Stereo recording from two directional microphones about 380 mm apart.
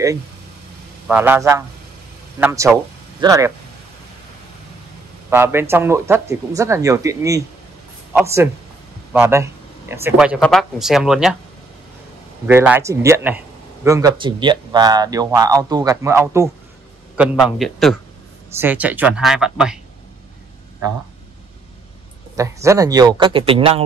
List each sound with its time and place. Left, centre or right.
1.0 s a man's voice: centre
5.3 s a man's voice: centre
12.4 s a man's voice: centre
22.4 s speech: centre